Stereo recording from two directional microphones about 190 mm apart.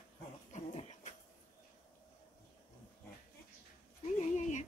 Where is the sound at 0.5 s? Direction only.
35° left (ahead or behind).